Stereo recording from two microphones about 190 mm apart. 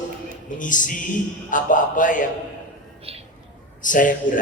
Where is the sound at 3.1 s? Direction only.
30° right (ahead or behind).